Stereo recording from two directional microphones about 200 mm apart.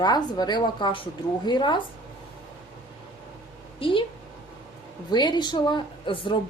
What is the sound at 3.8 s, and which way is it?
Speech, 25° left (ahead or behind).